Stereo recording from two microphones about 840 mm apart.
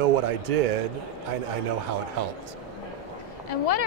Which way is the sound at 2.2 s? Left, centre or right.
Right.